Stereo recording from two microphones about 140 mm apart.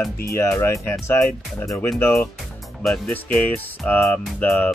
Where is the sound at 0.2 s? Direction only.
20° left (ahead or behind).